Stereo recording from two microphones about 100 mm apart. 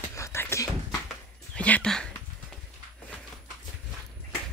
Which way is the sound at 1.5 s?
15° left (ahead or behind).